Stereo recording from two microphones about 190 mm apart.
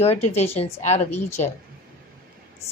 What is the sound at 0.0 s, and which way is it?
A woman's voice, 35° left (ahead or behind).